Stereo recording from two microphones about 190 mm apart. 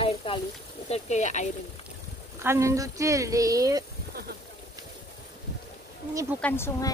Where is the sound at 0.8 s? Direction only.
35° left (ahead or behind).